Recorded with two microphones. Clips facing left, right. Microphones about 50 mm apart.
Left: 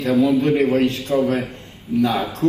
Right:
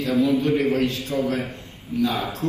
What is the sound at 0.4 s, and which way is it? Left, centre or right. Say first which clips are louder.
A man's voice: left 4 dB; left.